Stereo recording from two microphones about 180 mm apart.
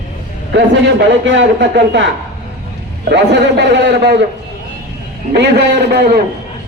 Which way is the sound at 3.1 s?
75° right (ahead or behind).